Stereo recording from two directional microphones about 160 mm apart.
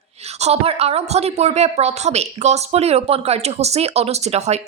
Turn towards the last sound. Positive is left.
turn(degrees=-45)  # may be behind; listen again after turning